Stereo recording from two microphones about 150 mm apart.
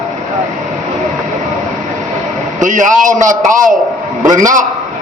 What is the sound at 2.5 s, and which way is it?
A man's voice, 55° right (ahead or behind).